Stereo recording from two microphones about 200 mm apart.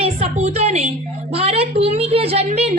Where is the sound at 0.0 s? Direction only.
30° right (ahead or behind).